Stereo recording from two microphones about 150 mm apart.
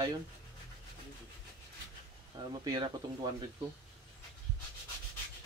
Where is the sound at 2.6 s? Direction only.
30° right (ahead or behind).